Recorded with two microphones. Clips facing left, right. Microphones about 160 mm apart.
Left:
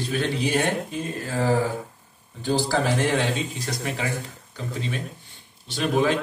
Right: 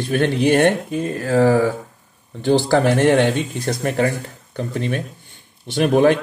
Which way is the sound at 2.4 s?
65° right (ahead or behind).